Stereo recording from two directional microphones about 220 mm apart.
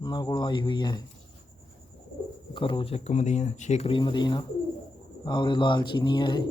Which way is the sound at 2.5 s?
25° left (ahead or behind).